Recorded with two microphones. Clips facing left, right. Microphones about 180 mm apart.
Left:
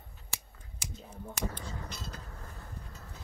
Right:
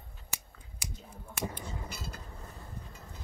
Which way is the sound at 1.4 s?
10° right (ahead or behind).